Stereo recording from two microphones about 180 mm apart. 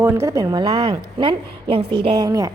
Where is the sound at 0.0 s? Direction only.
15° right (ahead or behind).